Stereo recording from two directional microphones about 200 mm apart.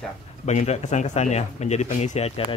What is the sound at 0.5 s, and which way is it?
Speech, 35° left (ahead or behind).